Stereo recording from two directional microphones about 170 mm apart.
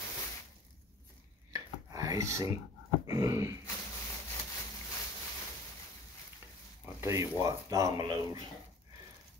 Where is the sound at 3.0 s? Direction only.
15° right (ahead or behind).